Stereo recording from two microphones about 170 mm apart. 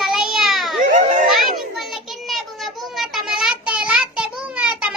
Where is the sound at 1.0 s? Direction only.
45° right (ahead or behind).